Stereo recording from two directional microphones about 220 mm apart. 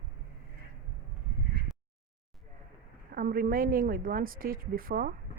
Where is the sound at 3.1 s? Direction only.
40° right (ahead or behind).